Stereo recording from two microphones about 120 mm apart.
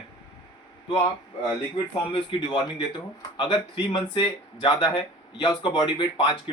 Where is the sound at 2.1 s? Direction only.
40° left (ahead or behind).